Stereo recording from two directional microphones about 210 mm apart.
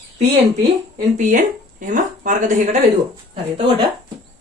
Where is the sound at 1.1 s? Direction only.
35° right (ahead or behind).